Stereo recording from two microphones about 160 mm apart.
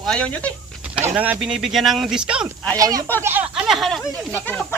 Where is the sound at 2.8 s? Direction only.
25° right (ahead or behind).